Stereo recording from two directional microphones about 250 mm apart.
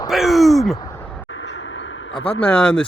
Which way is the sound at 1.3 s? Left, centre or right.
Left.